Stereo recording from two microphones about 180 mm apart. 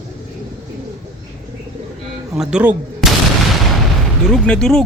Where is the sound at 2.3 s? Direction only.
5° right (ahead or behind).